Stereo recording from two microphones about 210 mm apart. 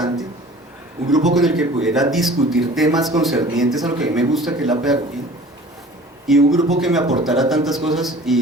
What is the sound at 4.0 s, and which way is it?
Speech, centre (ahead or behind).